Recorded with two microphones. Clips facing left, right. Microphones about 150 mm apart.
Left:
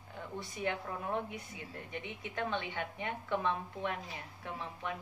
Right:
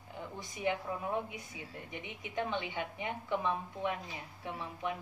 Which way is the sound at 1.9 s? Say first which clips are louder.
Left 2 dB; 15° right (ahead or behind).